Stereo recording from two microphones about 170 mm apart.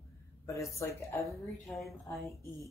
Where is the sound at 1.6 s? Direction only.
Centre (ahead or behind).